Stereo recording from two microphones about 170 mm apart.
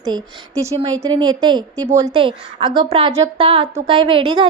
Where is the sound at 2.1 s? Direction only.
30° right (ahead or behind).